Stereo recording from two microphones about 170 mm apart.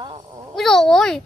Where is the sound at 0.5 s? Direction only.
Centre (ahead or behind).